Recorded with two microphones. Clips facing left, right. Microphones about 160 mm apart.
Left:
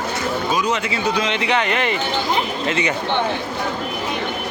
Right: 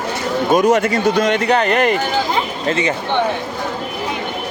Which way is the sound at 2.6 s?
30° right (ahead or behind).